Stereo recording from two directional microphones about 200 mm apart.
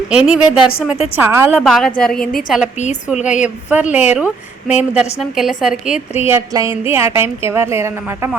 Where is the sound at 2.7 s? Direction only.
35° left (ahead or behind).